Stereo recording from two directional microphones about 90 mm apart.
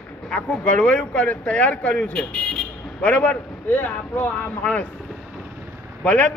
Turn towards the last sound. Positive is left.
turn(degrees=15)  # may be behind; listen again after turning